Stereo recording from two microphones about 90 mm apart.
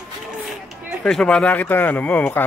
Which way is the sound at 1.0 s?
5° left (ahead or behind).